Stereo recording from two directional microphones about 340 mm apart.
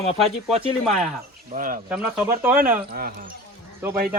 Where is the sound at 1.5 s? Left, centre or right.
Right.